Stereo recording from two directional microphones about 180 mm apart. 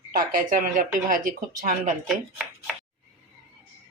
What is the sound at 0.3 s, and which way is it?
Speech, 45° right (ahead or behind).